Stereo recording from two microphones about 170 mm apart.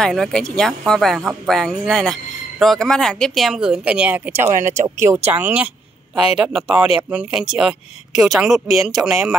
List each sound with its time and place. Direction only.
0.0 s speech: 5° left (ahead or behind)